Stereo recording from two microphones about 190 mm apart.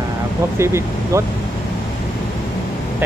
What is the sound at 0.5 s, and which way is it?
Speech, 15° right (ahead or behind).